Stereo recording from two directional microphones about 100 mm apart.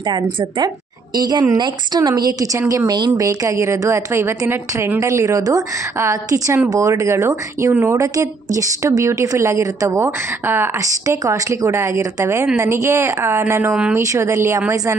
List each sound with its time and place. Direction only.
0.0 s a woman's voice: 50° right (ahead or behind); by 10.7 s 20° right (ahead or behind)
10.8 s a woman's voice: 35° right (ahead or behind)